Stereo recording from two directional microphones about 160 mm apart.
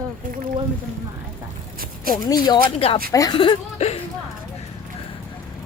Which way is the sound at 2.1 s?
25° left (ahead or behind).